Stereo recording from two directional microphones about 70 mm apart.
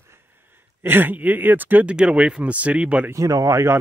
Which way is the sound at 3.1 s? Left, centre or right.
Right.